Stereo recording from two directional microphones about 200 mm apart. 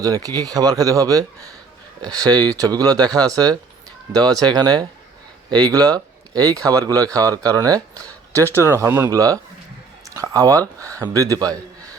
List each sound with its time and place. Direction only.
0.0 s speech: 20° right (ahead or behind)